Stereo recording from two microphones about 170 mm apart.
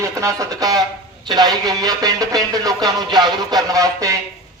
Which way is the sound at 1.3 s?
25° right (ahead or behind).